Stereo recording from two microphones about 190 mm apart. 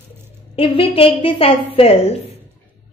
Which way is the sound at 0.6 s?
30° left (ahead or behind).